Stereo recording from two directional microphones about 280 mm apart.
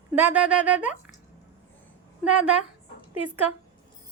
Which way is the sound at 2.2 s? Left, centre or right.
Centre.